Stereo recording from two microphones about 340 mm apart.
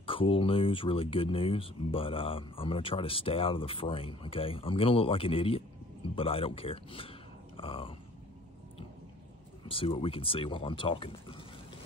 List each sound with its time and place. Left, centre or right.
0.0 s speech: centre
7.5 s grunt: centre
9.7 s speech: centre